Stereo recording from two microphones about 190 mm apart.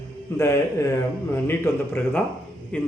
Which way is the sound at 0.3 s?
15° left (ahead or behind).